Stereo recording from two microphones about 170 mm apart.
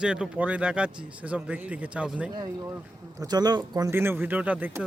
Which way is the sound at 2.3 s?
20° right (ahead or behind).